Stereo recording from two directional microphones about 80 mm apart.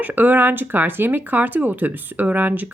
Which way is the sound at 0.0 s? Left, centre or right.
Right.